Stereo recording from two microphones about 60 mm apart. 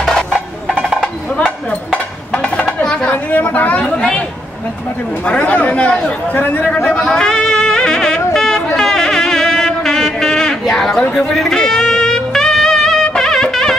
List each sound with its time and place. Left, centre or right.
0.0 s music: centre
1.0 s a sound: centre
2.3 s music: centre
2.8 s a sound: centre
3.1 s chatter: left
5.2 s speech: left
6.3 s speech: left
6.9 s a sound: centre
11.0 s speech: centre
11.3 s music: centre